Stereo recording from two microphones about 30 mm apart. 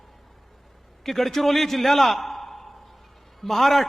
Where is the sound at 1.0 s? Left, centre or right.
Centre.